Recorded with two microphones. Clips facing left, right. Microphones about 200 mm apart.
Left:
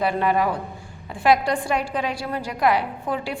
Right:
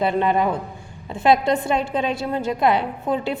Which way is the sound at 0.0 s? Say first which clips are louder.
Right 2 dB; 25° right (ahead or behind).